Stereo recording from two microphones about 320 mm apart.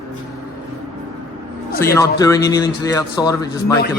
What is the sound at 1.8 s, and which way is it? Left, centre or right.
Speech, centre.